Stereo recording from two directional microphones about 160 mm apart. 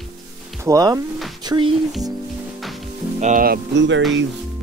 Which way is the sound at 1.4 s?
30° right (ahead or behind).